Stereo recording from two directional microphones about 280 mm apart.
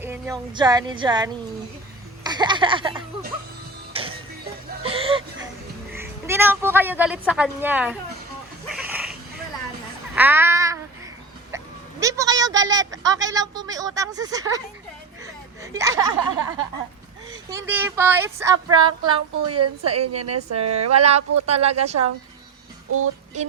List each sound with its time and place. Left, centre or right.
0.0 s speech: centre
3.9 s music: centre
4.8 s chuckle: centre
5.9 s speech: centre
8.7 s goat: centre
10.2 s child singing: centre
11.5 s a sound: centre
13.1 s speech: centre
15.6 s speech: centre
19.5 s a woman's voice: right
20.9 s speech: right